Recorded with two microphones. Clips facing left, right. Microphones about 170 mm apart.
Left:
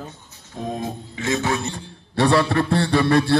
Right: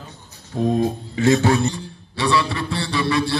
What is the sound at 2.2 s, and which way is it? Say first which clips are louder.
A man's voice: left 3 dB; 55° left (ahead or behind).